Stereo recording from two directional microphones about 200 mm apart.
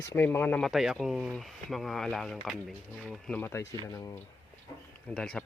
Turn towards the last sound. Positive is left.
turn(degrees=5)  # may be behind; listen again after turning